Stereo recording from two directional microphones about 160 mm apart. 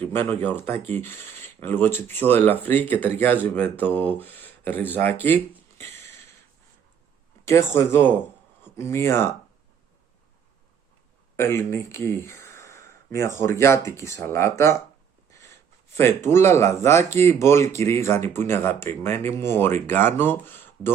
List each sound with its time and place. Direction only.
0.0 s speech: 15° left (ahead or behind)
7.4 s speech: 15° left (ahead or behind)
11.3 s speech: 15° left (ahead or behind)
15.3 s snort: 20° left (ahead or behind)
16.0 s speech: 15° left (ahead or behind)